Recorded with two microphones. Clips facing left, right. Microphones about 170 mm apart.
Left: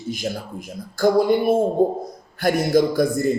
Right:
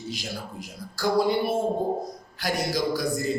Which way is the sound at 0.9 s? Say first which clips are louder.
Left 6 dB; 50° left (ahead or behind).